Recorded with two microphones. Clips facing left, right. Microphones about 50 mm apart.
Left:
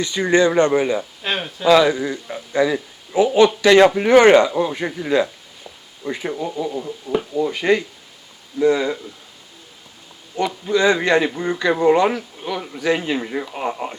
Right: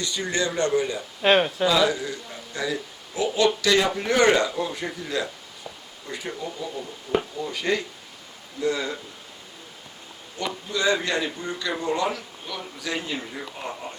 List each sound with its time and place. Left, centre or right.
0.0 s speech: left
1.2 s speech: centre
1.8 s a man's voice: left
10.3 s a man's voice: left
12.5 s a man's voice: left
12.9 s a man's voice: left
13.3 s a man's voice: left